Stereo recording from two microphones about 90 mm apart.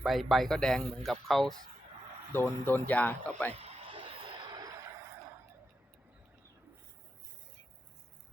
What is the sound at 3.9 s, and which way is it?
Vehicle, 80° right.